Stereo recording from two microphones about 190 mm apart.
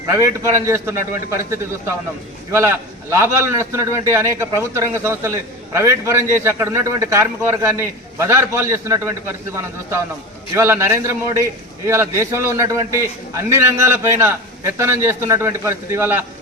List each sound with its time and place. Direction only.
0.0 s a man's voice: 15° right (ahead or behind)
2.5 s a man's voice: 15° right (ahead or behind)